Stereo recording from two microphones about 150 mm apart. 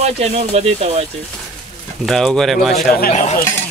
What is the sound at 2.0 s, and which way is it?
Speech, centre (ahead or behind).